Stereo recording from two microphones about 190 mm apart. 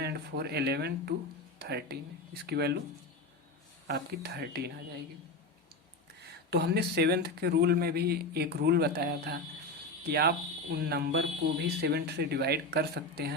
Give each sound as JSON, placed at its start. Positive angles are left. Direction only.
{"t": 0.0, "sound": "speech", "side_deg": -60}
{"t": 3.8, "sound": "speech", "side_deg": -60}
{"t": 6.5, "sound": "speech", "side_deg": -60}